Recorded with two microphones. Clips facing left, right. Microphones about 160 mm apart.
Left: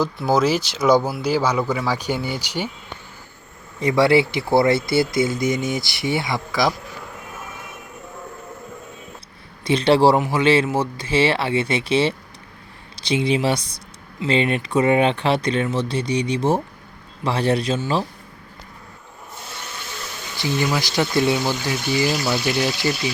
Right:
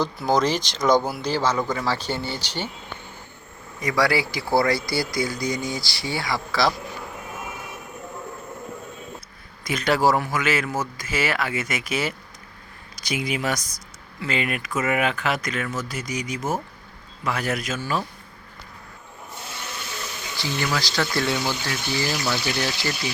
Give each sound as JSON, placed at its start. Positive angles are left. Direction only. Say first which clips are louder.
{"t": 0.0, "sound": "speech", "louder": "left 3 dB", "side_deg": 5}
{"t": 3.8, "sound": "speech", "louder": "left 6 dB", "side_deg": 25}
{"t": 9.6, "sound": "speech", "louder": "left 6 dB", "side_deg": 30}
{"t": 20.4, "sound": "speech", "louder": "left 5 dB", "side_deg": 15}